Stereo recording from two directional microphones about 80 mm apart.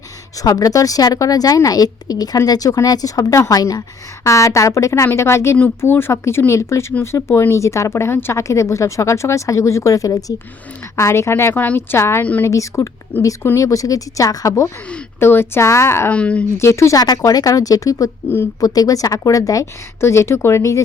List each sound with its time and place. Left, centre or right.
0.4 s speech: left
4.3 s speech: left
13.1 s speech: left
13.6 s speech: left
15.2 s speech: left
16.0 s speech: centre
16.6 s speech: left
17.2 s speech: left